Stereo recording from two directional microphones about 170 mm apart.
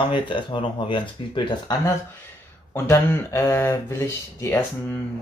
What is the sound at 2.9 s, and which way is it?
Speech, 20° left (ahead or behind).